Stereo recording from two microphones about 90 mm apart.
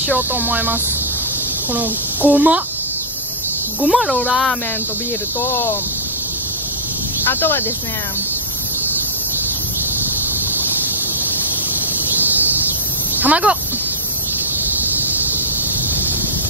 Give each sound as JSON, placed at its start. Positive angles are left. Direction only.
{"t": 0.3, "sound": "speech", "side_deg": -20}
{"t": 3.8, "sound": "speech", "side_deg": 0}
{"t": 5.4, "sound": "speech", "side_deg": 30}
{"t": 7.2, "sound": "speech", "side_deg": 25}
{"t": 12.2, "sound": "a sound", "side_deg": -20}
{"t": 13.1, "sound": "speech", "side_deg": -15}